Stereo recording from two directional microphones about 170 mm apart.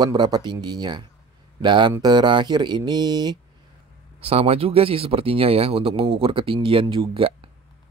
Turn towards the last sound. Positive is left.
turn(degrees=-30)  # may be behind; listen again after turning